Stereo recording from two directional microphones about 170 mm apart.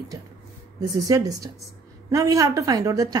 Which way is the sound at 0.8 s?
20° right (ahead or behind).